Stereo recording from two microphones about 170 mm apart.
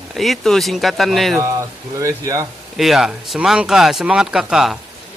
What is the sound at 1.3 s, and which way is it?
Speech, 20° right (ahead or behind).